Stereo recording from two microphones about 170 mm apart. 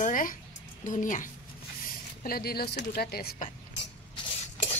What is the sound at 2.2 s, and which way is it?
Speech, 60° left (ahead or behind).